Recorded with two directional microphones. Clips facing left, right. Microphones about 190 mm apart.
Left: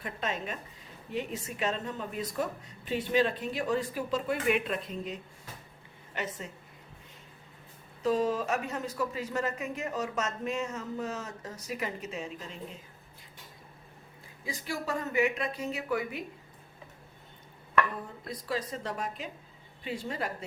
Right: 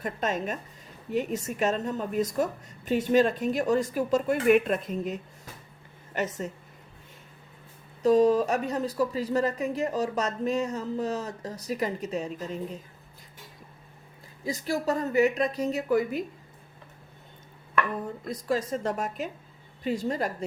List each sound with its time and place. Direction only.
0.0 s a woman's voice: 45° right (ahead or behind)
8.0 s speech: 40° right (ahead or behind)
14.4 s speech: 40° right (ahead or behind)
18.3 s a woman's voice: 45° right (ahead or behind)